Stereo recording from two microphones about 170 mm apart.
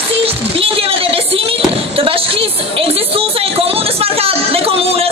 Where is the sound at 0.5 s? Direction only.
35° right (ahead or behind).